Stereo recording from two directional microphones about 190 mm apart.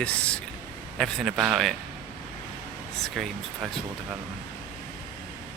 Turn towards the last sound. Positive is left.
turn(degrees=0)  # may be behind; listen again after turning